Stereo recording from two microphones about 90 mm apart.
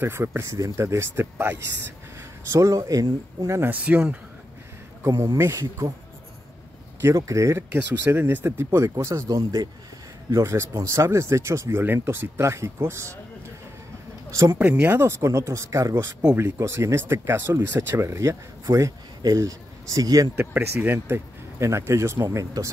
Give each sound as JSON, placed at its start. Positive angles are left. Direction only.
{"t": 0.0, "sound": "speech", "side_deg": -25}
{"t": 2.1, "sound": "speech", "side_deg": -35}
{"t": 3.7, "sound": "speech", "side_deg": -15}
{"t": 5.1, "sound": "speech", "side_deg": -60}
{"t": 5.4, "sound": "speech", "side_deg": -35}
{"t": 7.0, "sound": "speech", "side_deg": -30}
{"t": 8.7, "sound": "speech", "side_deg": -35}
{"t": 14.6, "sound": "speech", "side_deg": -20}
{"t": 20.3, "sound": "speech", "side_deg": -25}